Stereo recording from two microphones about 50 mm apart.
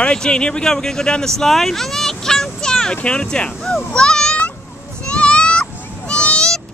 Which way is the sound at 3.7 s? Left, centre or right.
Centre.